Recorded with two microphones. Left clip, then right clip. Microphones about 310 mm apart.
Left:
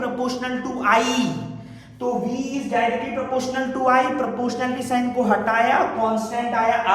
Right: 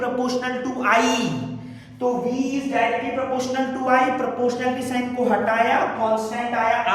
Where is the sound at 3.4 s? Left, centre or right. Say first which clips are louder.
Left 1 dB; centre.